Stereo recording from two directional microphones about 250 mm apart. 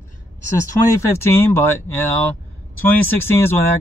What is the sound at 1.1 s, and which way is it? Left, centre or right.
Speech, centre.